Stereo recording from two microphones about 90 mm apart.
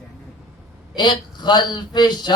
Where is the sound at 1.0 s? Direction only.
55° left (ahead or behind).